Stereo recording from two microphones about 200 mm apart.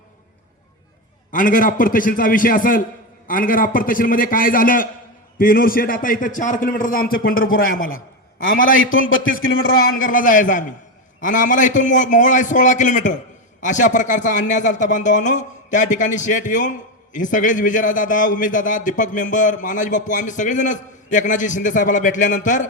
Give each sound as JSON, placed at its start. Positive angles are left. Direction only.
{"t": 1.3, "sound": "a man's voice", "side_deg": 40}
{"t": 8.7, "sound": "a man's voice", "side_deg": 80}
{"t": 10.1, "sound": "a man's voice", "side_deg": 40}